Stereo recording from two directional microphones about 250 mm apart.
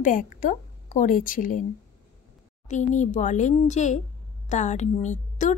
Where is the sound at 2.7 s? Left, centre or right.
Left.